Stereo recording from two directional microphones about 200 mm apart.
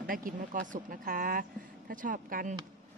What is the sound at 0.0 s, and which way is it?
Speech, 45° right (ahead or behind).